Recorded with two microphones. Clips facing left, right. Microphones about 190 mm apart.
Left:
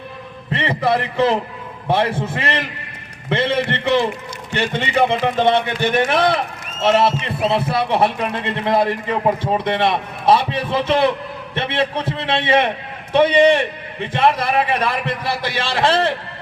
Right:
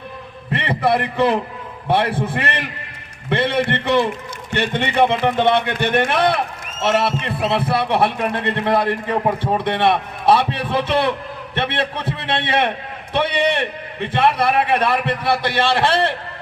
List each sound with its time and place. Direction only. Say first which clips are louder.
0.5 s a man's voice: even; 60° right (ahead or behind)
14.1 s a man's voice: even; 60° right (ahead or behind)